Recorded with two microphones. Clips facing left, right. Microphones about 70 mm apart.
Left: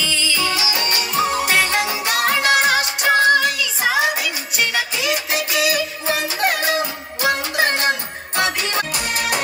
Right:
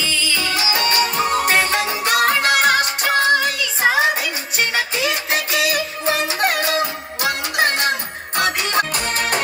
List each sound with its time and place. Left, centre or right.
0.3 s music: right
7.5 s music: right